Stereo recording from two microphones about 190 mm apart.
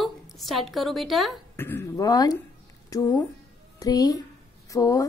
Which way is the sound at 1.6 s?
10° left (ahead or behind).